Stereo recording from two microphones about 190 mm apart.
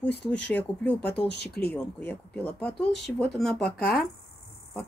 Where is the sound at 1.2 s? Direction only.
60° left (ahead or behind).